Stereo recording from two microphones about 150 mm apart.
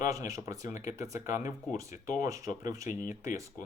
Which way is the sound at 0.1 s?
20° right (ahead or behind).